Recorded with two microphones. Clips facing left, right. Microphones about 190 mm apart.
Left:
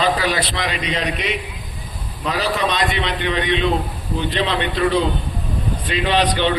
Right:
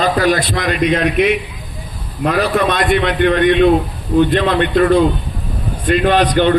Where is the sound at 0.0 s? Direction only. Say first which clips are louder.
Right 5 dB; 50° right (ahead or behind).